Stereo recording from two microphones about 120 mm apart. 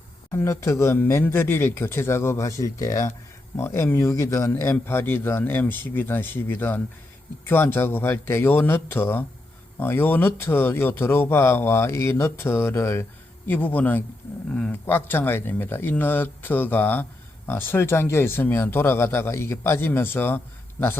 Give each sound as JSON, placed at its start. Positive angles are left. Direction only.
{"t": 0.3, "sound": "a man's voice", "side_deg": 25}